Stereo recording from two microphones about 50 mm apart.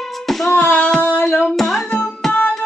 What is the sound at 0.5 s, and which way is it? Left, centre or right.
Female singing, left.